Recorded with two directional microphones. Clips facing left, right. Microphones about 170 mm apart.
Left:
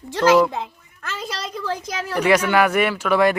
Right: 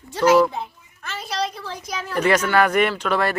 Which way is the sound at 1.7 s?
90° left.